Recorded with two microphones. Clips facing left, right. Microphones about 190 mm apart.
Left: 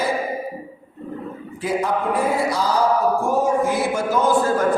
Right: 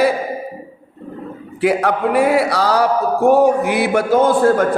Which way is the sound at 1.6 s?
70° right (ahead or behind).